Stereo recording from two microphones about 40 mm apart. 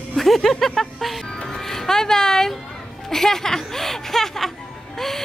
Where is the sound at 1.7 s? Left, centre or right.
Centre.